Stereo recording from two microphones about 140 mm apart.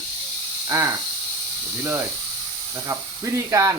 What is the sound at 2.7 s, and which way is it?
Speech, 20° right (ahead or behind).